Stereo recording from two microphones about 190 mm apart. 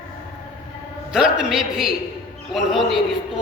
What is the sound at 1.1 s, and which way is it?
A man's voice, 5° right (ahead or behind).